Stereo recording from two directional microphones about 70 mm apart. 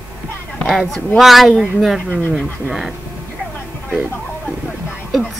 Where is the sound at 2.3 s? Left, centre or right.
Centre.